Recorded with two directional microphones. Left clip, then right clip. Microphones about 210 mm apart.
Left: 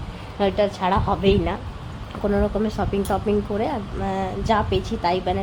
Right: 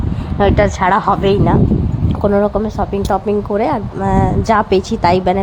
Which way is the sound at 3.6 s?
25° right (ahead or behind).